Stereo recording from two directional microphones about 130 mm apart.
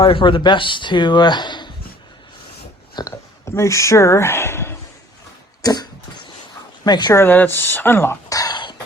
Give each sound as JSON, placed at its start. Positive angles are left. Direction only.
{"t": 0.0, "sound": "speech", "side_deg": 40}
{"t": 2.9, "sound": "speech", "side_deg": 25}
{"t": 5.6, "sound": "cough", "side_deg": 30}
{"t": 6.8, "sound": "speech", "side_deg": 35}
{"t": 7.1, "sound": "speech", "side_deg": 15}